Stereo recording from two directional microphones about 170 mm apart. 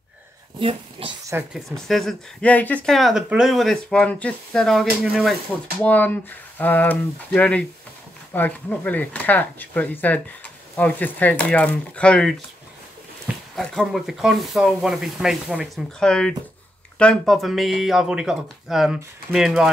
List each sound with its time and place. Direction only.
0.6 s a child's voice: 30° right (ahead or behind)
1.3 s speech: centre (ahead or behind)
5.8 s speech: 10° left (ahead or behind)